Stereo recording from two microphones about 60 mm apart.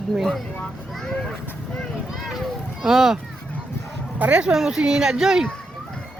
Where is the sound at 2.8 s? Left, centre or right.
Centre.